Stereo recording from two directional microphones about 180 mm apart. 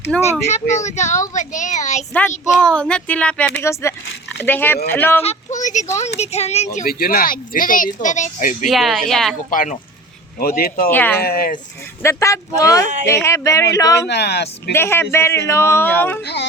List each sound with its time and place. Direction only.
0.2 s speech: 40° left (ahead or behind)
2.6 s a man's voice: 5° left (ahead or behind)
5.2 s speech: 40° left (ahead or behind)
6.7 s speech: 55° left (ahead or behind)
8.7 s speech: centre (ahead or behind)
9.5 s speech: 50° left (ahead or behind)
10.9 s a man's voice: 10° left (ahead or behind)
11.2 s speech: 55° left (ahead or behind)
12.0 s a man's voice: 15° left (ahead or behind)
14.1 s speech: 65° left (ahead or behind)
14.7 s a man's voice: 15° left (ahead or behind)
16.2 s speech: 70° left (ahead or behind)